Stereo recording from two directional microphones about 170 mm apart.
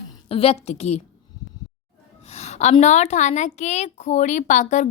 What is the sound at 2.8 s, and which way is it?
A woman's voice, 45° left (ahead or behind).